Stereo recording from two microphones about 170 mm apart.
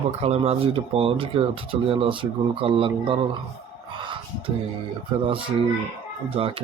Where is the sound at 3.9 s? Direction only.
30° right (ahead or behind).